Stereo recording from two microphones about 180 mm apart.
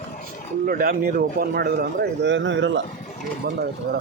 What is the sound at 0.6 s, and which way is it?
Speech, 55° right (ahead or behind).